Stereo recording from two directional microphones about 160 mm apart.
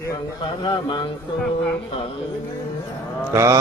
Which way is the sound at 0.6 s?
25° left (ahead or behind).